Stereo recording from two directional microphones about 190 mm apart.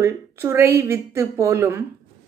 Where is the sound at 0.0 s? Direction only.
15° right (ahead or behind).